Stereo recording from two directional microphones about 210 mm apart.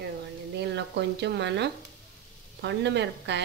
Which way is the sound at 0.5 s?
55° right (ahead or behind).